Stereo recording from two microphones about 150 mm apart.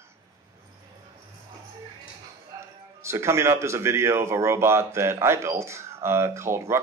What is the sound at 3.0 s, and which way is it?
Speech, 20° right (ahead or behind).